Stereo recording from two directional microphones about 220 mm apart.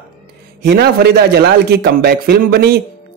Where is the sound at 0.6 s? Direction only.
50° right (ahead or behind).